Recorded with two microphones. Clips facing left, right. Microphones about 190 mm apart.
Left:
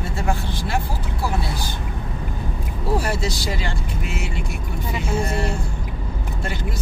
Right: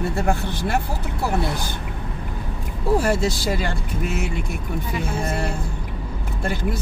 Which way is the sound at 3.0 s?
50° right (ahead or behind).